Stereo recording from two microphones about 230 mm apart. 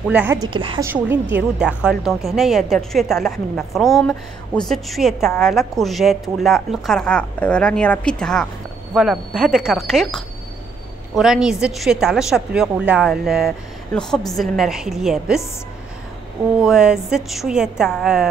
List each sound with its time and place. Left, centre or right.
0.1 s a woman's voice: centre
0.5 s a woman's voice: right
0.8 s a woman's voice: centre
16.6 s a woman's voice: centre